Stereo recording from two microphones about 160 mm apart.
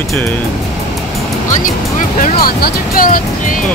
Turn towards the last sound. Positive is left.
turn(degrees=60)  # may be behind; listen again after turning